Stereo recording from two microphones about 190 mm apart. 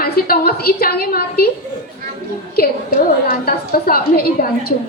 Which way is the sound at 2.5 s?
55° left (ahead or behind).